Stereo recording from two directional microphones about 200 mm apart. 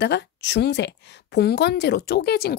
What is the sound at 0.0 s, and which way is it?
A woman's voice, 60° left (ahead or behind).